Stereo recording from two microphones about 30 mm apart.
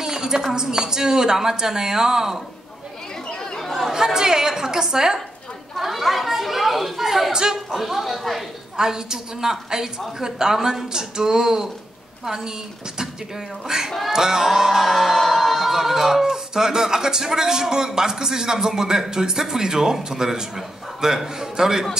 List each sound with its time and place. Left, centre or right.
0.0 s a sound: right
0.5 s speech: right
3.3 s chatter: left
3.6 s chatter: centre
3.9 s speech: centre
5.8 s chatter: centre
7.3 s speech: right
7.8 s speech: centre
8.7 s speech: right
14.1 s music: right
15.2 s music: centre
15.7 s speech: centre